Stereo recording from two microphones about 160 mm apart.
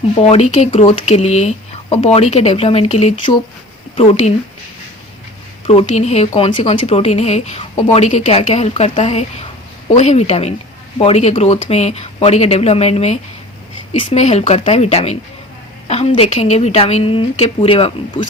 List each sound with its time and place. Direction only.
0.2 s speech: 40° left (ahead or behind)
5.6 s speech: 40° left (ahead or behind)